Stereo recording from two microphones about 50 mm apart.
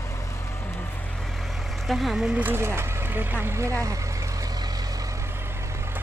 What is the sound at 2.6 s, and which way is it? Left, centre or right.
Speech, right.